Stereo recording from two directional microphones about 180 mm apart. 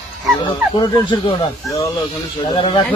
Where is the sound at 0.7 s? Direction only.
25° left (ahead or behind).